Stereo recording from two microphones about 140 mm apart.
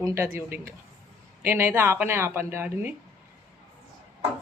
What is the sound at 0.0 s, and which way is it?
A woman's voice, 20° right (ahead or behind).